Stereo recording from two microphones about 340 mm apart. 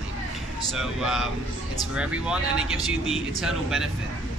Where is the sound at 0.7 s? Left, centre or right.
Centre.